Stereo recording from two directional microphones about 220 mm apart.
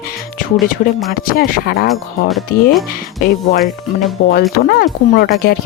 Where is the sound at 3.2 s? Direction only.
40° left (ahead or behind).